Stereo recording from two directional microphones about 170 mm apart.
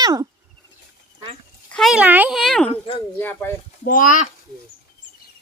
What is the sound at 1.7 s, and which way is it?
Speech, centre (ahead or behind).